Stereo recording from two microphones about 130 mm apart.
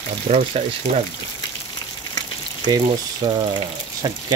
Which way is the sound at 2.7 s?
35° right (ahead or behind).